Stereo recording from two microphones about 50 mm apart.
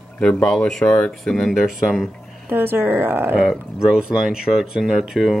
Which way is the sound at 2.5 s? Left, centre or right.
Right.